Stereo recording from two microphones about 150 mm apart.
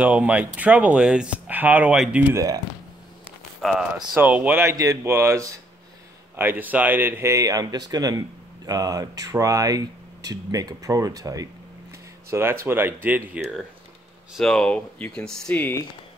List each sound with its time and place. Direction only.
0.0 s speech: 10° right (ahead or behind)
3.7 s speech: 10° right (ahead or behind)
14.3 s speech: 5° left (ahead or behind)